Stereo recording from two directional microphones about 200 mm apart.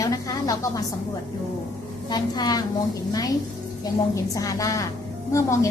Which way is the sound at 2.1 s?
20° left (ahead or behind).